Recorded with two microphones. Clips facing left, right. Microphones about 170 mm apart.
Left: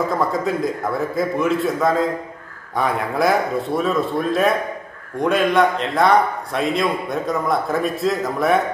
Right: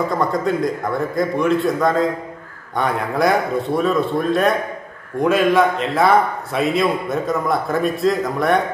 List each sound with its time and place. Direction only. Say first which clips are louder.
0.1 s a man's voice: right 1 dB; centre (ahead or behind)